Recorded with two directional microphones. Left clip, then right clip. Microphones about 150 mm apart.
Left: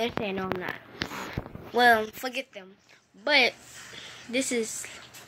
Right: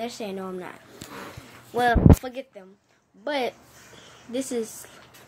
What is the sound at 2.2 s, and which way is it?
Speech, 20° right (ahead or behind).